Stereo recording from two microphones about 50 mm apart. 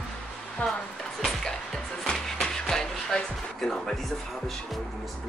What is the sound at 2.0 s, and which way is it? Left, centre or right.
Music, centre.